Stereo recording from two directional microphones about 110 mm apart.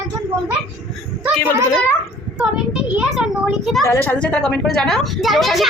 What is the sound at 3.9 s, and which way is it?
A woman's voice, 15° left (ahead or behind).